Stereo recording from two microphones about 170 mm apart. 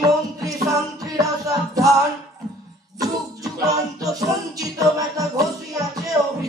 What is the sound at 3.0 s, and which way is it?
Music, 20° right (ahead or behind).